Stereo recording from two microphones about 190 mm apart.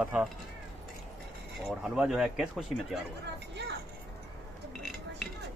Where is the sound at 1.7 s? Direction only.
5° right (ahead or behind).